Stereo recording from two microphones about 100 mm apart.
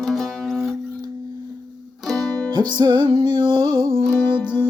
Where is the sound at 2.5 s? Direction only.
50° right (ahead or behind).